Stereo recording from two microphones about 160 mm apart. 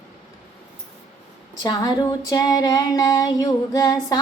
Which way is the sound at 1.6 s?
25° left (ahead or behind).